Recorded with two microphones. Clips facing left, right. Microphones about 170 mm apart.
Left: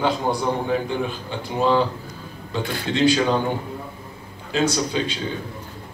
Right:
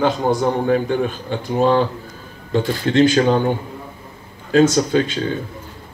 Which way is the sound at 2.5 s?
50° right (ahead or behind).